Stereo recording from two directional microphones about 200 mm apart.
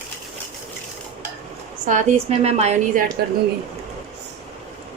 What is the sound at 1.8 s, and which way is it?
A woman's voice, 35° right (ahead or behind).